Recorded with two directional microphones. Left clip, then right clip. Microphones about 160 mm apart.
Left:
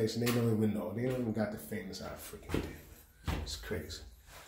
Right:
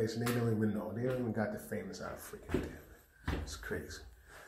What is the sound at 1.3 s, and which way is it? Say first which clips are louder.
Speech: even; 10° left (ahead or behind).